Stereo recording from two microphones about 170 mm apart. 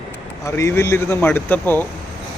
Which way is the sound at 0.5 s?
15° left (ahead or behind).